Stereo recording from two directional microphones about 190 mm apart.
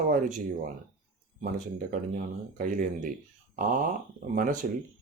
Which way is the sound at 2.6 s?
45° right (ahead or behind).